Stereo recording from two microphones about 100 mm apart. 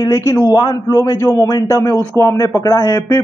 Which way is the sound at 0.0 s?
30° left (ahead or behind).